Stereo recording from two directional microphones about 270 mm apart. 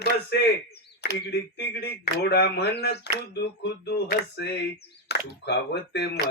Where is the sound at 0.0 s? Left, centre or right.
Left.